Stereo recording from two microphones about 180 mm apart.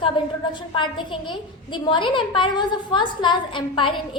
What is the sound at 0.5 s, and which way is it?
A woman's voice, 25° left (ahead or behind).